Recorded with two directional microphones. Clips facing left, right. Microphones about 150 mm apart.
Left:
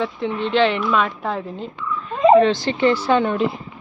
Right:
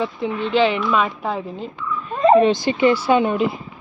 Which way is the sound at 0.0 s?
5° right (ahead or behind).